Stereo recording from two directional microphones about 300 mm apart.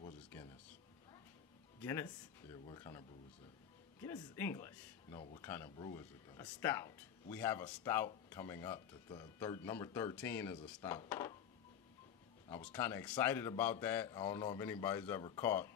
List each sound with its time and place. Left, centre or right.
0.0 s a sound: centre
1.8 s speech: centre
12.4 s speech: centre